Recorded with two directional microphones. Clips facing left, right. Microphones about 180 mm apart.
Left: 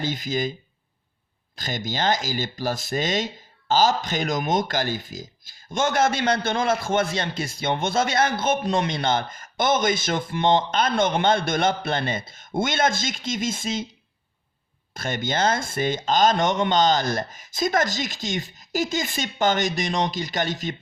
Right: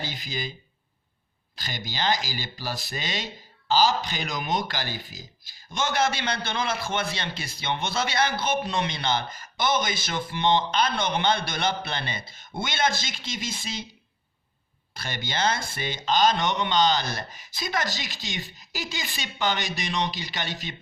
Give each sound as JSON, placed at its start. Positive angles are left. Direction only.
{"t": 0.0, "sound": "speech", "side_deg": 45}
{"t": 1.5, "sound": "speech", "side_deg": 45}
{"t": 14.9, "sound": "speech", "side_deg": 50}